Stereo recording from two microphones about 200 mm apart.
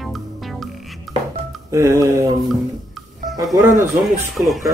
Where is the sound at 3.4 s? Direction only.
15° right (ahead or behind).